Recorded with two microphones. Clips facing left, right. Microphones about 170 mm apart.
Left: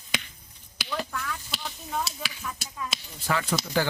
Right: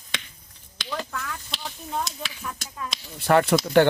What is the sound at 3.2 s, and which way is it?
Speech, 65° right (ahead or behind).